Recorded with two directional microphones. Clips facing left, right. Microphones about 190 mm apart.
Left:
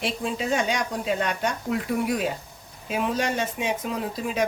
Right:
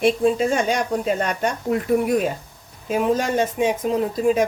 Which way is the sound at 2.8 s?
45° right (ahead or behind).